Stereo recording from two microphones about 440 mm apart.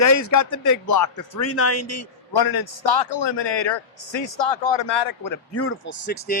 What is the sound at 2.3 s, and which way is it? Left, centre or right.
A man's voice, left.